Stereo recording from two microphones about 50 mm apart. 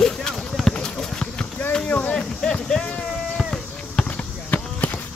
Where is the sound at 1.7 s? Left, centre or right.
Left.